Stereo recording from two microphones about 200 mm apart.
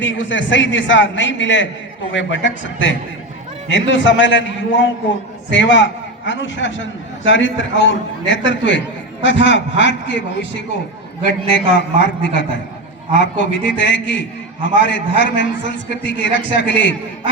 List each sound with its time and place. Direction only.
0.0 s a man's voice: 70° left (ahead or behind)